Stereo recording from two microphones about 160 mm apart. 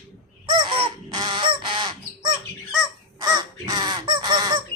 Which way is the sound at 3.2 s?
25° right (ahead or behind).